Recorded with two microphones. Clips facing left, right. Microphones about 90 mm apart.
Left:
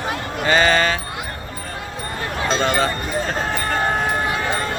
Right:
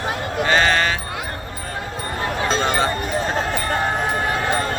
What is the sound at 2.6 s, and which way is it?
Speech, 20° right (ahead or behind).